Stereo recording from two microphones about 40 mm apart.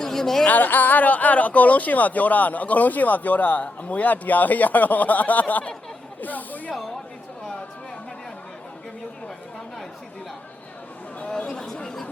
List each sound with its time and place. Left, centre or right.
0.0 s a sound: centre
0.4 s speech: left
11.3 s speech: centre